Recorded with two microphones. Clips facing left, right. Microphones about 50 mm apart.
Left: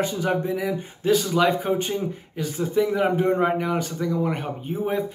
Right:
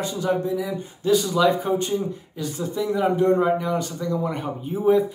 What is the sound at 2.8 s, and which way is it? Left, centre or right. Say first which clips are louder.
A man's voice: even; left.